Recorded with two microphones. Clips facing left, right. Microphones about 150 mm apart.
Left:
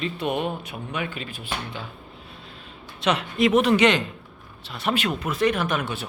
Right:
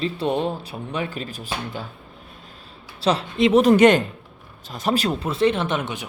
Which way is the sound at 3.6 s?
45° right (ahead or behind).